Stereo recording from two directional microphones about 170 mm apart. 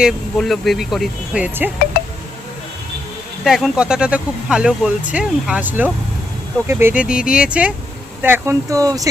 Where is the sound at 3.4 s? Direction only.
Centre (ahead or behind).